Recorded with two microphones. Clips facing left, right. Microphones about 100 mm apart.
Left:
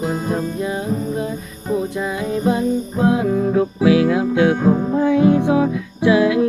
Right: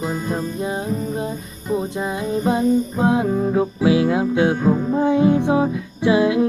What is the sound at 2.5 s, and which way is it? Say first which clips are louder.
Music: right 2 dB; 25° right (ahead or behind).